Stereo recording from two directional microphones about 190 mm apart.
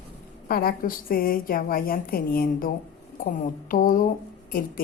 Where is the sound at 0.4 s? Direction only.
50° left (ahead or behind).